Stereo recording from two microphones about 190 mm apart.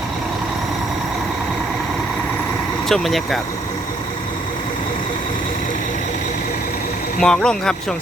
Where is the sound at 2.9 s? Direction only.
Centre (ahead or behind).